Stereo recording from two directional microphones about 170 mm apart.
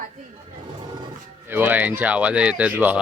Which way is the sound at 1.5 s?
10° right (ahead or behind).